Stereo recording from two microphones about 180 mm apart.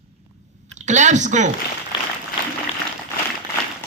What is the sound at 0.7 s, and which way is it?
Speech, 40° right (ahead or behind).